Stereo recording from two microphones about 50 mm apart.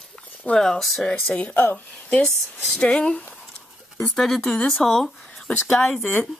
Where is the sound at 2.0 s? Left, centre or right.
Centre.